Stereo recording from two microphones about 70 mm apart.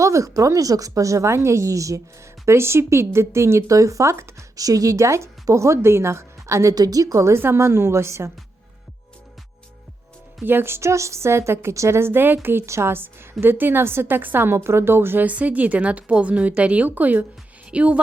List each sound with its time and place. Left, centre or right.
0.0 s speech: right
2.5 s a woman's voice: right
4.5 s speech: right
6.7 s a woman's voice: right
7.3 s a woman's voice: right
10.4 s a woman's voice: right